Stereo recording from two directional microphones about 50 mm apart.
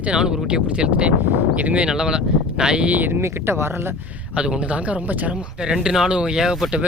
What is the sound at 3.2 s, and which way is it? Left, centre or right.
Speech, right.